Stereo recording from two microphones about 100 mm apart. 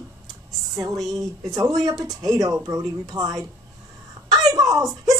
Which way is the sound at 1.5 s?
35° right (ahead or behind).